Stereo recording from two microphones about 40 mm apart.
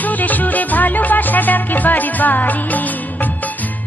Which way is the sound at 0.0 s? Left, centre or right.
Left.